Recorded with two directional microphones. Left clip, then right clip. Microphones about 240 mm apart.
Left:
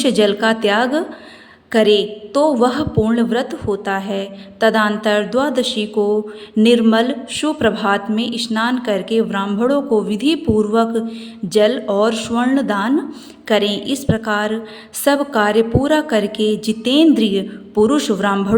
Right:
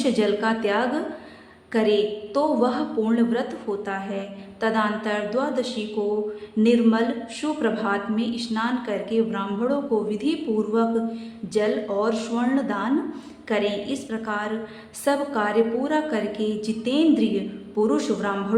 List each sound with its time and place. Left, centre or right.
0.0 s a woman's voice: left